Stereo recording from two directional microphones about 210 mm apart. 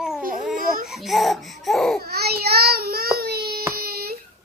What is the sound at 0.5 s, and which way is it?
Speech, 40° right (ahead or behind).